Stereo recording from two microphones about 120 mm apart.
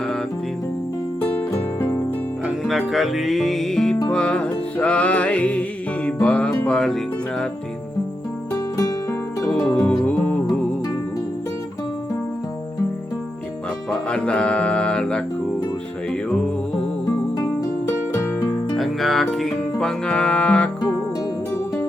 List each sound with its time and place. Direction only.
1.2 s music: 10° left (ahead or behind)
2.6 s music: centre (ahead or behind)
9.8 s music: 10° left (ahead or behind)
13.9 s music: 10° left (ahead or behind)
17.3 s music: 25° left (ahead or behind)
18.8 s music: centre (ahead or behind)